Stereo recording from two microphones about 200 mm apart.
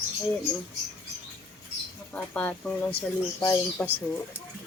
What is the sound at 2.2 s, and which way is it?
Speech, 5° left (ahead or behind).